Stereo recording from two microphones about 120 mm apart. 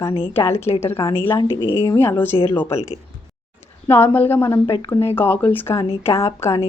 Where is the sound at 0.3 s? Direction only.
20° left (ahead or behind).